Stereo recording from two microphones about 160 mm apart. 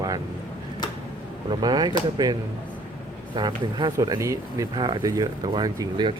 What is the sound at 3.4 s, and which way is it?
Speech, 25° right (ahead or behind).